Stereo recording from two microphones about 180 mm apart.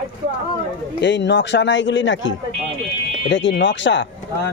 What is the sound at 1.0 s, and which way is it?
A man's voice, 75° left (ahead or behind).